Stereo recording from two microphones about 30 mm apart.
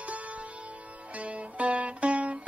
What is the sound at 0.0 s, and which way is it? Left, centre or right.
Music, right.